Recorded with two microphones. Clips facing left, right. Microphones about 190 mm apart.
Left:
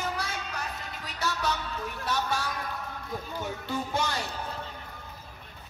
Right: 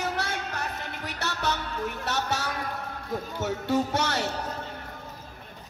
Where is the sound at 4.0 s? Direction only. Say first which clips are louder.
Right 4 dB; 70° right (ahead or behind).